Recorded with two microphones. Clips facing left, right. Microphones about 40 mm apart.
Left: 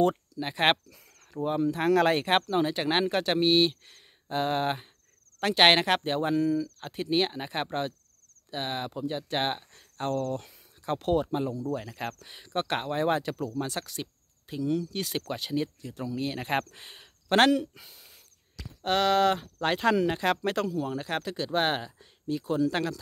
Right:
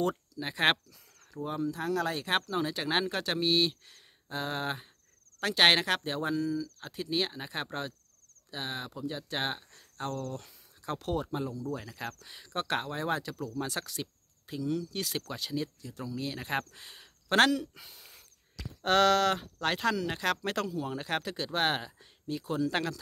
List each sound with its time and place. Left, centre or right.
0.4 s speech: centre
1.3 s speech: left
1.9 s speech: left
2.5 s speech: left
6.9 s speech: left
10.3 s speech: left
12.0 s speech: left
13.6 s speech: centre
17.7 s speech: centre